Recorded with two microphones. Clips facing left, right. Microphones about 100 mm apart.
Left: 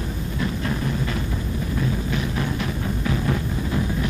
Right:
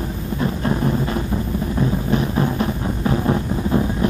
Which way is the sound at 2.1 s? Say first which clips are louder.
Right 6 dB; 35° right (ahead or behind).